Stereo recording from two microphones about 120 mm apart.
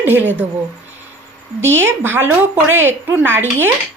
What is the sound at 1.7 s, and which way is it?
Speech, 20° right (ahead or behind).